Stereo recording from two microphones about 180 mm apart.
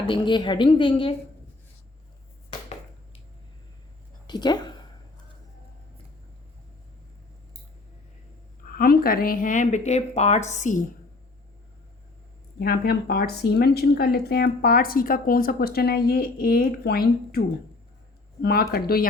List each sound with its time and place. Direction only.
0.1 s a woman's voice: 25° left (ahead or behind)
4.3 s a woman's voice: 25° left (ahead or behind)
8.7 s speech: 55° left (ahead or behind)
12.5 s speech: 60° left (ahead or behind)
18.4 s speech: 60° left (ahead or behind)